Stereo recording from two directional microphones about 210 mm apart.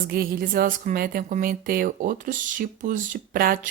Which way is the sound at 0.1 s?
45° right (ahead or behind).